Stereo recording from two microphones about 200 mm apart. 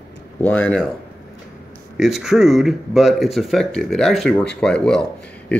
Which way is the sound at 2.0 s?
Centre (ahead or behind).